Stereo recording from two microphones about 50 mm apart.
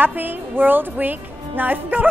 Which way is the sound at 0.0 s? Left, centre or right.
Right.